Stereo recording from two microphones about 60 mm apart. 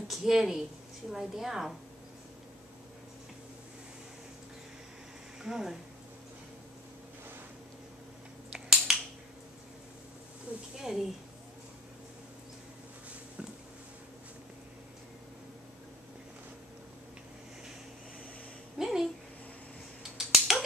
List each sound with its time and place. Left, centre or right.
0.1 s a woman's voice: centre
5.4 s speech: centre
8.5 s finger snapping: centre
10.5 s insect: right
10.8 s speech: centre
18.8 s a sound: centre
20.0 s finger snapping: centre